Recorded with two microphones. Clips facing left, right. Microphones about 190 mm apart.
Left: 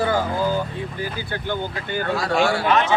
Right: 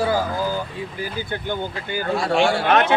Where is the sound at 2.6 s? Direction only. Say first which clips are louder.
Right 2 dB; 55° right (ahead or behind).